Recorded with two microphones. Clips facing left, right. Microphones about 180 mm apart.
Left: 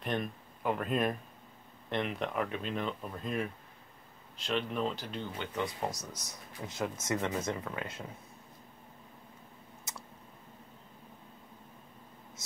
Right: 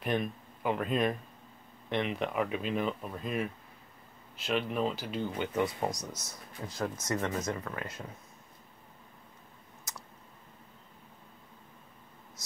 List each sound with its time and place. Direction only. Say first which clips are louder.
0.0 s a sound: right 3 dB; 5° right (ahead or behind)
1.9 s speech: right 2 dB; centre (ahead or behind)
5.9 s speech: right 3 dB; 5° left (ahead or behind)
6.7 s speech: even; 20° left (ahead or behind)
9.9 s clicking: even; 25° left (ahead or behind)